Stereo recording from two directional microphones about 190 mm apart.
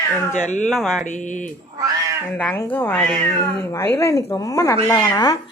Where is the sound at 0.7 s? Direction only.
Centre (ahead or behind).